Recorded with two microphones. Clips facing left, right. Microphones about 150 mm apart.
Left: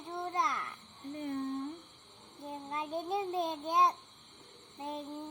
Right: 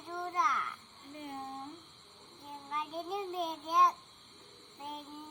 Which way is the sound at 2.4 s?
25° left (ahead or behind).